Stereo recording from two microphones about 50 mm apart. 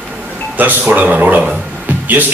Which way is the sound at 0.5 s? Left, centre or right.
Right.